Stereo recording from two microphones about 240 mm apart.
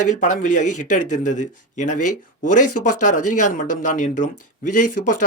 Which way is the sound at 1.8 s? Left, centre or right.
Left.